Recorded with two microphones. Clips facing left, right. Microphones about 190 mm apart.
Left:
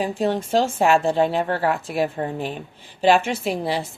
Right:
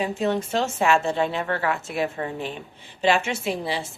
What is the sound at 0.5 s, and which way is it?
Speech, 30° left (ahead or behind).